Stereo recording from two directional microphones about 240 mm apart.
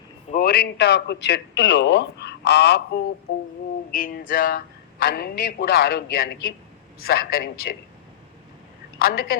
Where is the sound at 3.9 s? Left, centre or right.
Left.